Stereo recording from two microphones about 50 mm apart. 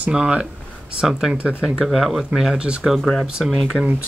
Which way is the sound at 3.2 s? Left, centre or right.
Centre.